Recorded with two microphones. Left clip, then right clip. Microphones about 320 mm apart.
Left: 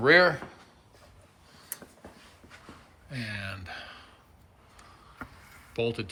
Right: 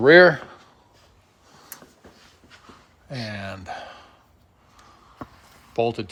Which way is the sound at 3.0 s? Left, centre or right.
Centre.